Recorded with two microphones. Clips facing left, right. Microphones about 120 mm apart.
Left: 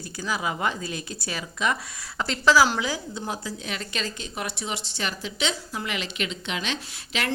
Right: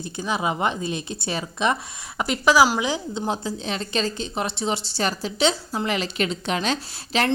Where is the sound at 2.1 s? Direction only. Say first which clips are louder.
Right 2 dB; 15° right (ahead or behind).